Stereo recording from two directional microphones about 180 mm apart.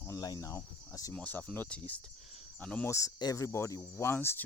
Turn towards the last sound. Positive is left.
turn(degrees=10)  # may be behind; listen again after turning